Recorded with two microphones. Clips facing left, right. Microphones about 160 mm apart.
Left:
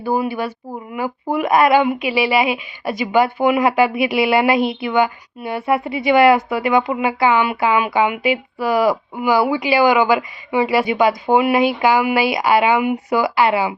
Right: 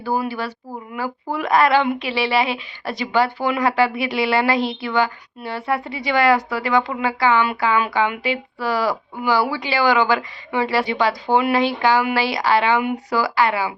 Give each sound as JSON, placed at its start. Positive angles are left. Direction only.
{"t": 0.0, "sound": "a woman's voice", "side_deg": 15}